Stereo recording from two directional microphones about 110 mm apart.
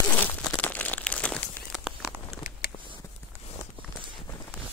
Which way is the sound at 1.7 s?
Centre (ahead or behind).